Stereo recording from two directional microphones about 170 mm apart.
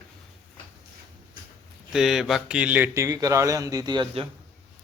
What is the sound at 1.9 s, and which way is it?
A man's voice, centre (ahead or behind).